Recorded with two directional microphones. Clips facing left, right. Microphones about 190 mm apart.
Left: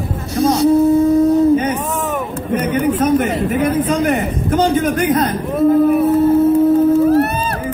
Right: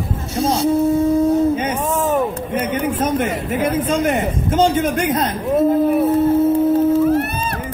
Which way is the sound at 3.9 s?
25° right (ahead or behind).